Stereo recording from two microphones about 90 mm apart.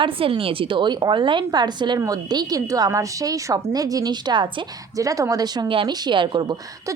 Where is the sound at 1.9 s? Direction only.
45° right (ahead or behind).